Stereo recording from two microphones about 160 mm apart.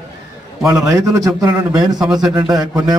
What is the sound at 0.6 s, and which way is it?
A man's voice, 20° right (ahead or behind).